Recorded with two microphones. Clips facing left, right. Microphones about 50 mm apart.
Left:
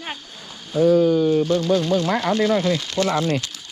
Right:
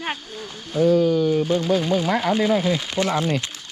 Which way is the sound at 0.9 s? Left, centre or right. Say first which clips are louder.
Left 2 dB; left.